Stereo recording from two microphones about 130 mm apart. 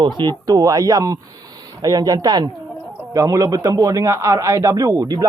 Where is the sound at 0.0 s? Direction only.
35° right (ahead or behind).